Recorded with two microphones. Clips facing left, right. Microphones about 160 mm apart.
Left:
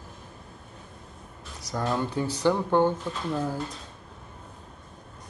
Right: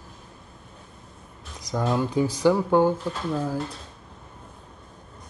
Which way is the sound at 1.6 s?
15° right (ahead or behind).